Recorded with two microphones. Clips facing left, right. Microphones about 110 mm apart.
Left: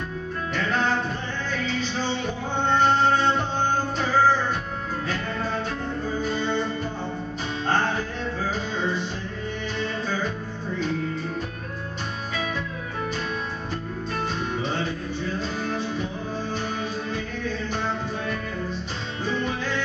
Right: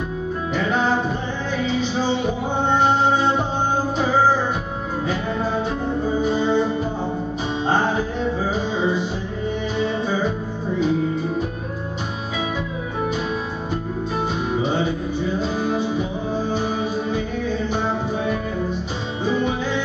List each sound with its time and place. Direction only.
0.6 s music: 5° right (ahead or behind)
5.9 s music: 20° right (ahead or behind)
6.2 s music: 5° right (ahead or behind)
14.5 s music: 5° right (ahead or behind)